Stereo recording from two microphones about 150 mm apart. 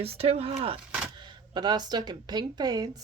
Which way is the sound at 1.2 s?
30° right (ahead or behind).